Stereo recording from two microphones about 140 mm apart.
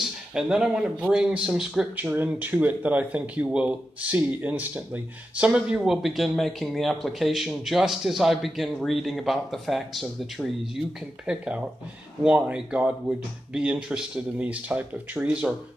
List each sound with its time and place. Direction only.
0.0 s speech: 5° right (ahead or behind)